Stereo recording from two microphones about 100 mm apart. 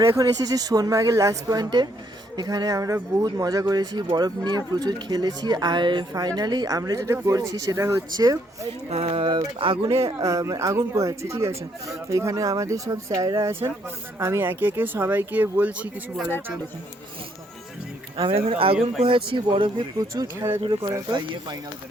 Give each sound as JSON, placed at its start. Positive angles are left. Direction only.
{"t": 0.0, "sound": "speech", "side_deg": -30}
{"t": 8.9, "sound": "a sound", "side_deg": -90}
{"t": 9.3, "sound": "speech", "side_deg": -60}
{"t": 9.9, "sound": "speech", "side_deg": -85}
{"t": 10.2, "sound": "speech", "side_deg": -30}
{"t": 13.4, "sound": "speech", "side_deg": -25}
{"t": 18.2, "sound": "speech", "side_deg": -70}